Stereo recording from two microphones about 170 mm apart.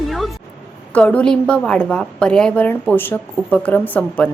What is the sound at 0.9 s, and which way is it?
A woman's voice, 5° left (ahead or behind).